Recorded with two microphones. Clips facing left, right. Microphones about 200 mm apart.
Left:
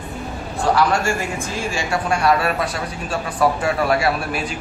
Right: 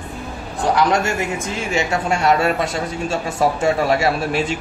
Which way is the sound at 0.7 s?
20° right (ahead or behind).